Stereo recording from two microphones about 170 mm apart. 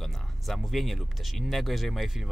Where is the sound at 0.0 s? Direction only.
Centre (ahead or behind).